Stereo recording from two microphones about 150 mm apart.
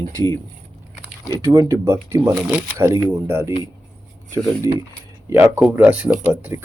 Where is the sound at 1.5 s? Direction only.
20° right (ahead or behind).